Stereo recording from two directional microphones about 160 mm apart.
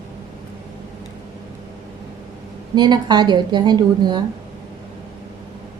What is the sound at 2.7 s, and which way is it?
A woman's voice, 25° right (ahead or behind).